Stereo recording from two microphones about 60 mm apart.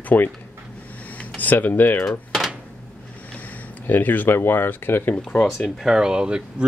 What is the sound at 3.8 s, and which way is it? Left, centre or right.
Speech, left.